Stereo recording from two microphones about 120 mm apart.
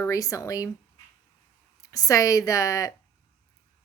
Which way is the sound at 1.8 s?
30° left (ahead or behind).